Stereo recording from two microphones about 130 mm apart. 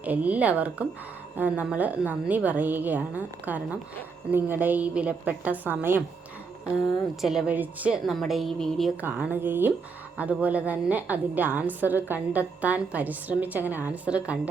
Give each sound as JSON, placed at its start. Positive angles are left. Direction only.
{"t": 0.0, "sound": "a woman's voice", "side_deg": -10}
{"t": 6.8, "sound": "a woman's voice", "side_deg": 0}
{"t": 9.0, "sound": "a woman's voice", "side_deg": -15}